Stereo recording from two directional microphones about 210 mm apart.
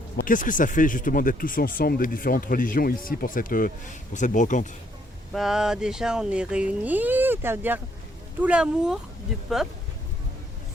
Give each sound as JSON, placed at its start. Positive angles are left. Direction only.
{"t": 0.2, "sound": "speech", "side_deg": 40}
{"t": 5.3, "sound": "speech", "side_deg": 0}